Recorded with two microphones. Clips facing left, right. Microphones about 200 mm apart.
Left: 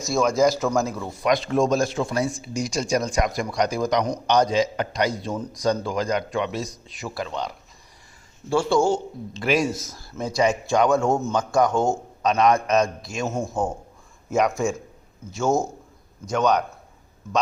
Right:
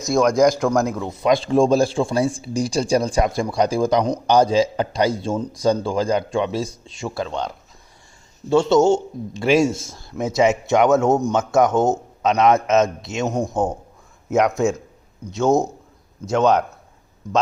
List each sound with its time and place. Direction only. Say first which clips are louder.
0.0 s a man's voice: right 4 dB; centre (ahead or behind)
0.9 s a man's voice: right 4 dB; 20° right (ahead or behind)
8.4 s a man's voice: right 5 dB; 20° right (ahead or behind)